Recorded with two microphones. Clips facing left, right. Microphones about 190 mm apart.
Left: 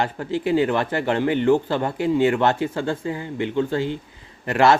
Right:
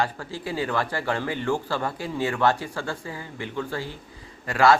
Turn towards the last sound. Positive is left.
turn(degrees=25)  # may be behind; listen again after turning